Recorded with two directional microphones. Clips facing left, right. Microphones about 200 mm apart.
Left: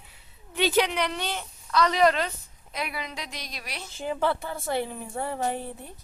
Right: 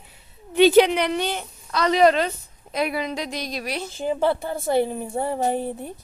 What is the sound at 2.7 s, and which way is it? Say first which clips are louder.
A woman's voice: right 9 dB; 40° right (ahead or behind).